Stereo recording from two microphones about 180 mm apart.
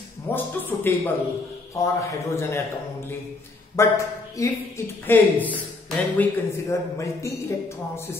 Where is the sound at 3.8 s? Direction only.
15° left (ahead or behind).